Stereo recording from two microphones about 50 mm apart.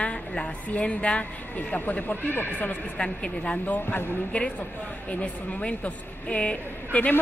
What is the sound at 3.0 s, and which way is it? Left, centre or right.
A woman's voice, left.